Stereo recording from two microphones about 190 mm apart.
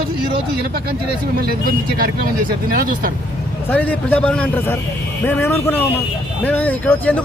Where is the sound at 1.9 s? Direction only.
50° right (ahead or behind).